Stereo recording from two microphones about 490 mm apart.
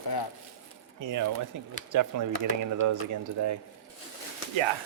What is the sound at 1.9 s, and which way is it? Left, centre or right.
Speech, right.